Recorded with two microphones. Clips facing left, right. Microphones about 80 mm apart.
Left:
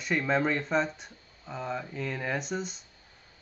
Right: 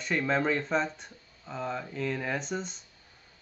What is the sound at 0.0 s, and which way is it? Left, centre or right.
Speech, centre.